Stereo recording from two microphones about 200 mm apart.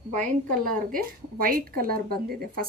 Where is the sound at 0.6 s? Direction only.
45° right (ahead or behind).